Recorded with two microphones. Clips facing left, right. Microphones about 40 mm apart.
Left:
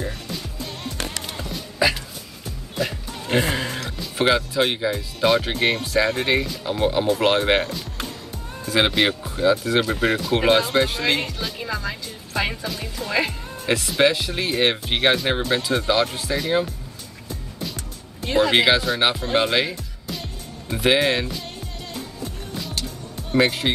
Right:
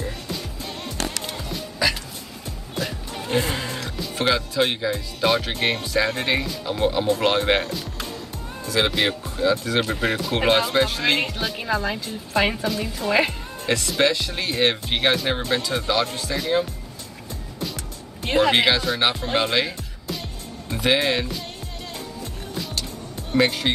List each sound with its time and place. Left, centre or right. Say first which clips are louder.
1.2 s music: even; centre
2.7 s music: left 3 dB; centre
3.3 s music: left 2 dB; left
4.2 s speech: left 2 dB; centre
8.6 s speech: left 2 dB; left
8.9 s speech: left 2 dB; centre
11.5 s a woman's voice: right 4 dB; centre
13.7 s speech: left 2 dB; centre
18.2 s speech: even; right
18.7 s speech: left 2 dB; centre
22.5 s music: right 1 dB; centre
23.3 s speech: left 1 dB; centre